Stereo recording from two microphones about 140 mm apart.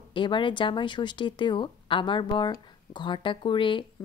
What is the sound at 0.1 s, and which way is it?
Speech, 35° left (ahead or behind).